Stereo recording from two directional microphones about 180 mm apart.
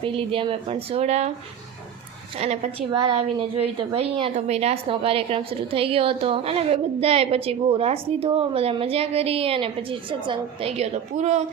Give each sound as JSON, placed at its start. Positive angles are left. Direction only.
{"t": 0.0, "sound": "a woman's voice", "side_deg": -30}
{"t": 2.4, "sound": "a woman's voice", "side_deg": -30}